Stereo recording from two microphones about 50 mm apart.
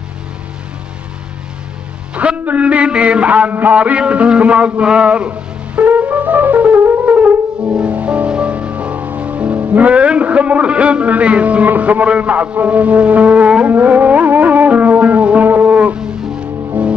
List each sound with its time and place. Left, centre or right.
2.1 s a sound: right
6.8 s brass instrument: right
7.1 s brass instrument: right
7.7 s music: right
16.0 s music: centre
16.8 s music: right